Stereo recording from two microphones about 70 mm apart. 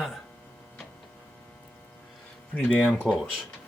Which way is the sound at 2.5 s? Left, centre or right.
Centre.